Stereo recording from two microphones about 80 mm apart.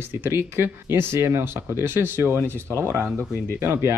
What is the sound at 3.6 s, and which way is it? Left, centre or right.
Speech, right.